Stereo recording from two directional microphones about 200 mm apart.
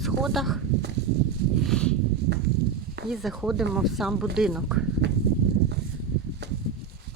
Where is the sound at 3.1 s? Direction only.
Centre (ahead or behind).